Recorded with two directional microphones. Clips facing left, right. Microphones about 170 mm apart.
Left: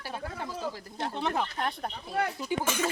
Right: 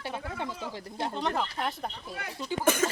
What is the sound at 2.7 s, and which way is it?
Speech, 45° right (ahead or behind).